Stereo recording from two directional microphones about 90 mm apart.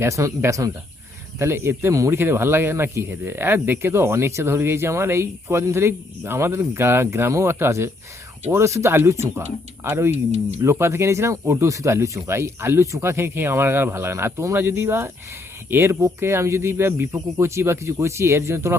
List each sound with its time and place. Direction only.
0.0 s speech: 35° right (ahead or behind)